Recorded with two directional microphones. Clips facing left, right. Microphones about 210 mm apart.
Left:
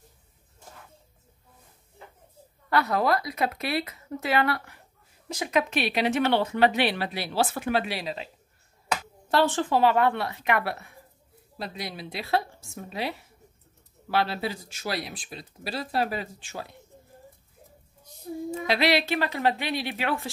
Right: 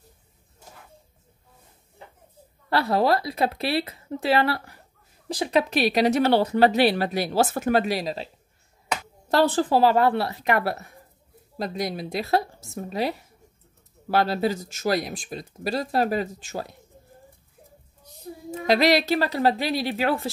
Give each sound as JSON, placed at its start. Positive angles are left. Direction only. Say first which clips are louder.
{"t": 2.7, "sound": "speech", "louder": "right 3 dB", "side_deg": -30}
{"t": 9.3, "sound": "speech", "louder": "right 3 dB", "side_deg": -40}
{"t": 18.7, "sound": "speech", "louder": "right 5 dB", "side_deg": -40}